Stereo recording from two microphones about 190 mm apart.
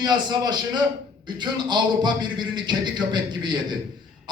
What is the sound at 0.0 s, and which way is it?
Speech, 20° right (ahead or behind).